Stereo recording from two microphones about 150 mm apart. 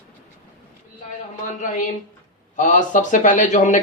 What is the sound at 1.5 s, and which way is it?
Speech, 60° left (ahead or behind).